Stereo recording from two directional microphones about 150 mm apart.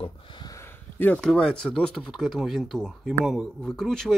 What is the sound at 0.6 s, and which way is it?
Speech, 15° left (ahead or behind).